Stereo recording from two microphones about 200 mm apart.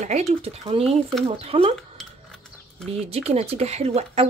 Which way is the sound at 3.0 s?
30° right (ahead or behind).